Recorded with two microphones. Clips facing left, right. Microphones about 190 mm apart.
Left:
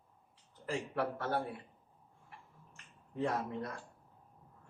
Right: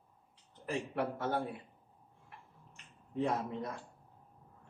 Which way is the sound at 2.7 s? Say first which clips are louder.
Right 6 dB; 15° right (ahead or behind).